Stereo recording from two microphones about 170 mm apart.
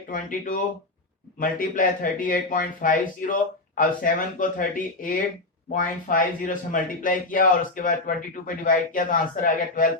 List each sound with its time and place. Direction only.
0.1 s speech: 55° left (ahead or behind)